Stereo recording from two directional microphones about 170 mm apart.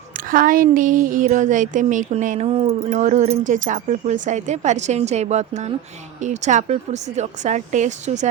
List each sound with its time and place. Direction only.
0.3 s speech: 55° right (ahead or behind)